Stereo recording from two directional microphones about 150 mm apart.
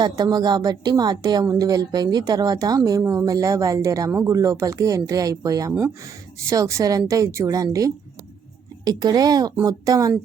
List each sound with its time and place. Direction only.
0.0 s a woman's voice: 25° right (ahead or behind)